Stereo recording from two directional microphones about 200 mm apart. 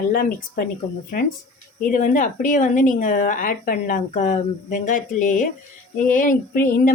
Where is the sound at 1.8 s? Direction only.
40° left (ahead or behind).